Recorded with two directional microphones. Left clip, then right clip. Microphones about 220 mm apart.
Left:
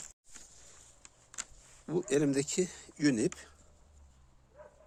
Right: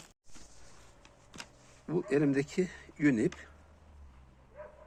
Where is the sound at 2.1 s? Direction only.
45° left (ahead or behind).